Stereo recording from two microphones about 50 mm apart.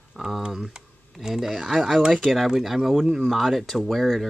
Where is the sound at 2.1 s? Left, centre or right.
Centre.